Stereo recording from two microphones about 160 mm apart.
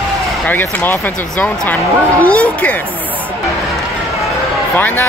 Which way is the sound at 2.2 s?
10° left (ahead or behind).